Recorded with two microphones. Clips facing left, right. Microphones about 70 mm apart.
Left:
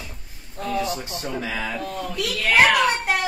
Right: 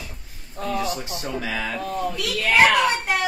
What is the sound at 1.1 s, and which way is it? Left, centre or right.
Speech, left.